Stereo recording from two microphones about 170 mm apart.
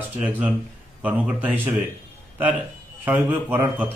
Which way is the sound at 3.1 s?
10° right (ahead or behind).